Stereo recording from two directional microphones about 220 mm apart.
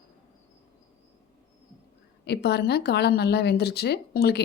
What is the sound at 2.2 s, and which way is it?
Speech, 50° left (ahead or behind).